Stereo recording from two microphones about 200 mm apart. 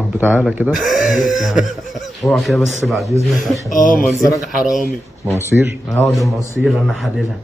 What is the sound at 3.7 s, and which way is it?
Speech, 40° left (ahead or behind).